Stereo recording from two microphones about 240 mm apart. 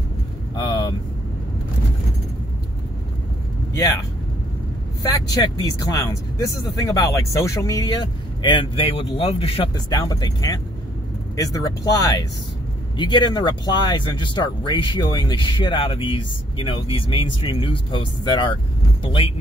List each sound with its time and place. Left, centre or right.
0.6 s vehicle: centre
5.9 s speech: centre